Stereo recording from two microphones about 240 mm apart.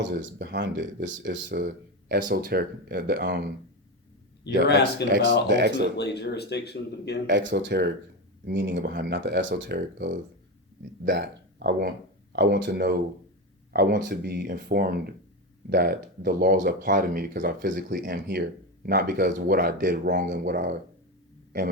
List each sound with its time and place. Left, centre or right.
0.0 s speech: right
4.4 s speech: left
5.0 s speech: right
6.0 s speech: left
7.3 s speech: right